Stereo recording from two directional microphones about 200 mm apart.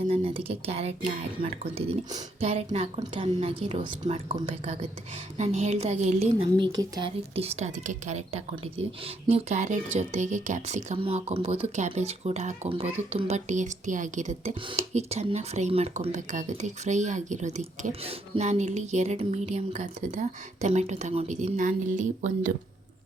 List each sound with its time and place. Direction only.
0.1 s a woman's voice: 30° right (ahead or behind)